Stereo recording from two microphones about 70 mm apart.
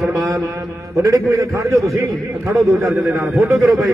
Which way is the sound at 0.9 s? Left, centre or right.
Right.